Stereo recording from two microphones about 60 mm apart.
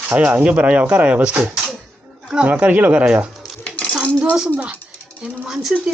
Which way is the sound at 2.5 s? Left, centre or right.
Right.